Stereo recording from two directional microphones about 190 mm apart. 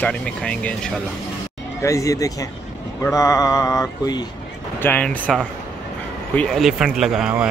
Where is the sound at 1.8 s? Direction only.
15° left (ahead or behind).